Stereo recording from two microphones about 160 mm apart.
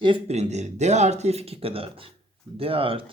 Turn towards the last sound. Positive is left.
turn(degrees=-35)  # may be behind; listen again after turning